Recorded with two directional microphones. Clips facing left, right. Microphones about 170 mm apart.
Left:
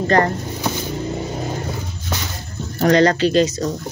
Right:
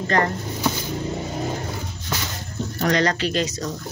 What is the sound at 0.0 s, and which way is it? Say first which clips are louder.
Speech: left 5 dB; 35° left (ahead or behind).